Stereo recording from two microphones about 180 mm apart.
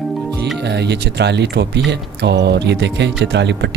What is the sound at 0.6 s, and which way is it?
Speech, 70° right (ahead or behind).